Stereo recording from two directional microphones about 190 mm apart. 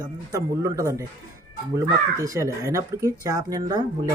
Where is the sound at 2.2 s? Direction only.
15° right (ahead or behind).